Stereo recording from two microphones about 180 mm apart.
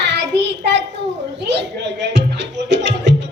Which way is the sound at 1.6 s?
75° right (ahead or behind).